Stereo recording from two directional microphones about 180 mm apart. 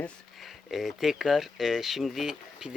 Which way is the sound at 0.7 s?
Centre (ahead or behind).